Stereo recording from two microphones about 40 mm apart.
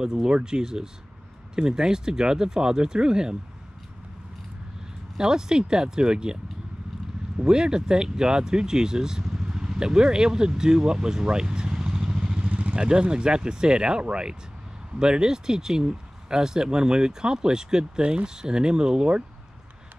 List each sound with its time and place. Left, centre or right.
0.0 s speech: centre
5.1 s speech: centre
7.3 s speech: centre